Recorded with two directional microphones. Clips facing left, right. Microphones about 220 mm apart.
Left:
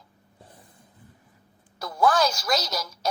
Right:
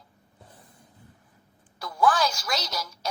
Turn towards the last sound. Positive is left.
turn(degrees=40)  # may be behind; listen again after turning